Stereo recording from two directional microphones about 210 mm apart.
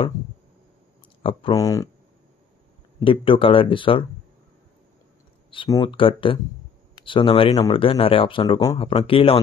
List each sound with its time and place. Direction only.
1.2 s speech: 20° left (ahead or behind)
3.0 s speech: 25° left (ahead or behind)
5.5 s speech: 25° left (ahead or behind)